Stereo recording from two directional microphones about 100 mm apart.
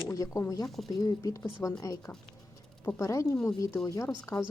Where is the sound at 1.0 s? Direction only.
35° left (ahead or behind).